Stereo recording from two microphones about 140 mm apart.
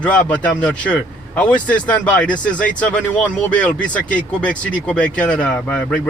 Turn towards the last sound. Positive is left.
turn(degrees=10)  # may be behind; listen again after turning